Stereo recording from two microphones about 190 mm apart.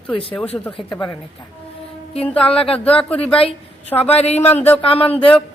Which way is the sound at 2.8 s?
5° left (ahead or behind).